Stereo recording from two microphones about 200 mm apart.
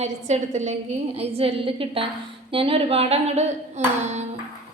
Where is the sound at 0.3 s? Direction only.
35° right (ahead or behind).